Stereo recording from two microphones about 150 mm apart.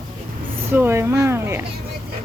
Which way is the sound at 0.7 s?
15° right (ahead or behind).